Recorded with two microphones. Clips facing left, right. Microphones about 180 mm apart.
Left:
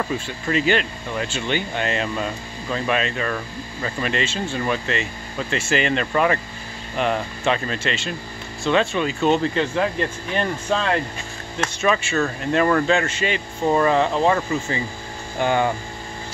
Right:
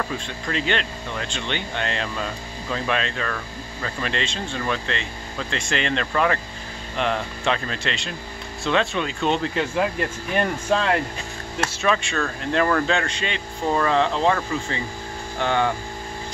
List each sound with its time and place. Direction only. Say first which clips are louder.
0.0 s speech: left 3 dB; 5° left (ahead or behind)